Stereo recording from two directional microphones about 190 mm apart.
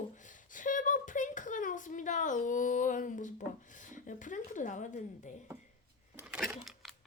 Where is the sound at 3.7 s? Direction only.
40° left (ahead or behind).